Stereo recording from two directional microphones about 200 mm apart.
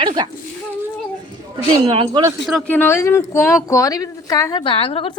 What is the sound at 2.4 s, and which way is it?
A woman's voice, 5° left (ahead or behind).